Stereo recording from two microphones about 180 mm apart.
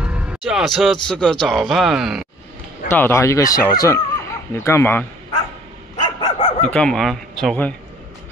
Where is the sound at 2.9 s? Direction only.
15° left (ahead or behind).